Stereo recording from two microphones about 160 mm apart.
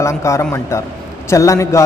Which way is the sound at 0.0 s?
20° left (ahead or behind).